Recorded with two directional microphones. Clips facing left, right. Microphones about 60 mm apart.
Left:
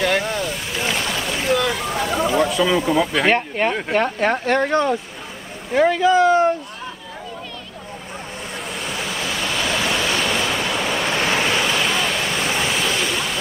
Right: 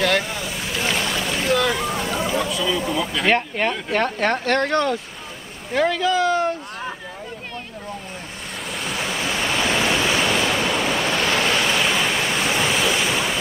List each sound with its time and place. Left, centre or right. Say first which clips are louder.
0.3 s boat: left 3 dB; centre
2.0 s a sound: left 3 dB; centre
2.3 s a sound: left 7 dB; left
2.9 s speech: left 5 dB; left
3.3 s speech: left 1 dB; centre
8.7 s waves: right 2 dB; centre
9.2 s waves: right 1 dB; centre
9.6 s waves: right 1 dB; right
9.8 s waves: right 1 dB; centre
10.3 s waves: right 1 dB; centre